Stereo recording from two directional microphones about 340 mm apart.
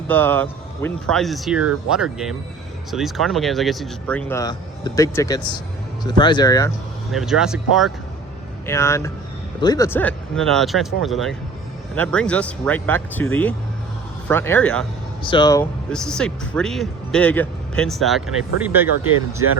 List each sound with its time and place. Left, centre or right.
0.1 s speech: centre
7.1 s speech: centre